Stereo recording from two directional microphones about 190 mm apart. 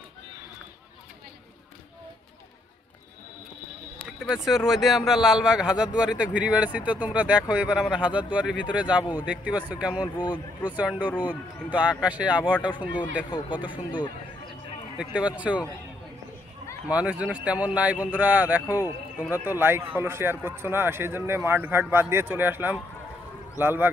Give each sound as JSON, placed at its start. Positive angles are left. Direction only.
{"t": 4.2, "sound": "a man's voice", "side_deg": 0}
{"t": 10.0, "sound": "speech", "side_deg": 25}
{"t": 10.6, "sound": "a man's voice", "side_deg": -10}
{"t": 13.3, "sound": "speech", "side_deg": 25}
{"t": 15.0, "sound": "a man's voice", "side_deg": -5}
{"t": 16.8, "sound": "a man's voice", "side_deg": -5}